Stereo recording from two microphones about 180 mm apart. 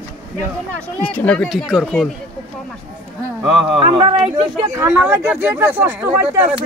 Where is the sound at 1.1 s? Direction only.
5° left (ahead or behind).